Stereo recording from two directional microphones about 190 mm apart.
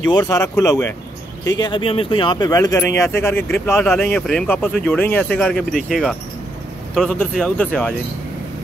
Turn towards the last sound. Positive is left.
turn(degrees=5)  # may be behind; listen again after turning